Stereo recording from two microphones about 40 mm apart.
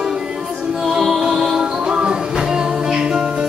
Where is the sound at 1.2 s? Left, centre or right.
Centre.